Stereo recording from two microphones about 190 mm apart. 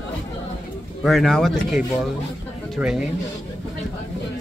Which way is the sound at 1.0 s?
Centre (ahead or behind).